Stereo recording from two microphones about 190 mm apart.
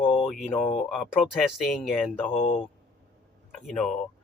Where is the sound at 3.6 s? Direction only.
Centre (ahead or behind).